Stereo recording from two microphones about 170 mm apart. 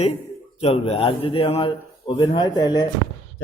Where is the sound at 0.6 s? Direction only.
35° left (ahead or behind).